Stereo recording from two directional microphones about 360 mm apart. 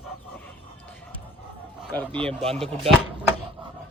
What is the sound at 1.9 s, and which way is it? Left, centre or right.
Speech, centre.